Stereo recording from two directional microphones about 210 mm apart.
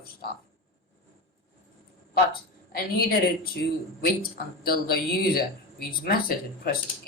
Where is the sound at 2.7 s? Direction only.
45° left (ahead or behind).